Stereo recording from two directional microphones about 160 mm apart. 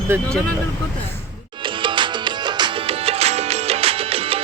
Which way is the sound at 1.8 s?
30° right (ahead or behind).